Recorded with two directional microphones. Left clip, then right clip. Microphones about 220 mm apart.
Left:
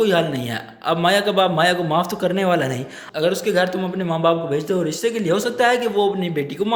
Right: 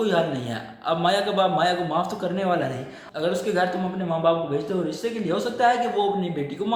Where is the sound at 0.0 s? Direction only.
45° left (ahead or behind).